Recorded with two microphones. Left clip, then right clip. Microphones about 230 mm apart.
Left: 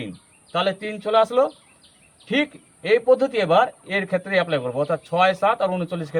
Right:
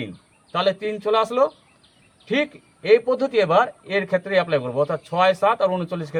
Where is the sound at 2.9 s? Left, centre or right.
Right.